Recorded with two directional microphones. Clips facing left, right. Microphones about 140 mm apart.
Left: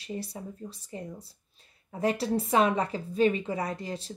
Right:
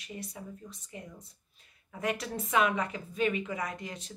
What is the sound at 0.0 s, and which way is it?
Speech, 35° left (ahead or behind).